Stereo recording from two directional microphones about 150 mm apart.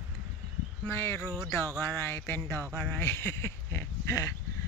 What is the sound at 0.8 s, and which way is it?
Speech, 15° left (ahead or behind).